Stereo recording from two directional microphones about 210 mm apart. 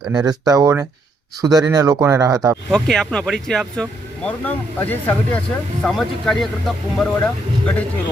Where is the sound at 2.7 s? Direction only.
5° left (ahead or behind).